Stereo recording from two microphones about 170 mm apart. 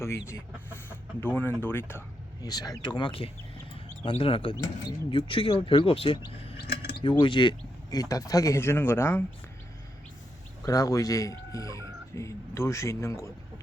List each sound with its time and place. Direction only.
0.3 s speech: 15° left (ahead or behind)
10.6 s speech: 20° left (ahead or behind)